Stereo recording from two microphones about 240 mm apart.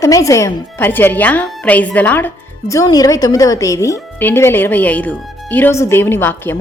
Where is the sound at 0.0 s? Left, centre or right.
Centre.